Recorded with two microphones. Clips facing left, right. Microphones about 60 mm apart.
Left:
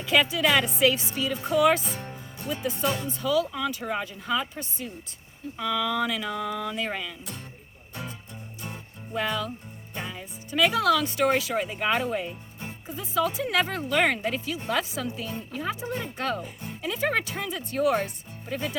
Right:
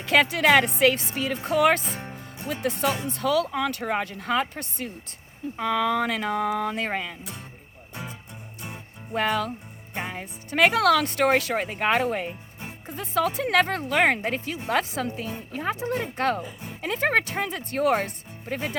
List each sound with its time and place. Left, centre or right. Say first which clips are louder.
0.0 s speech: right 3 dB; right
5.5 s speech: right 3 dB; right
9.1 s speech: right 4 dB; right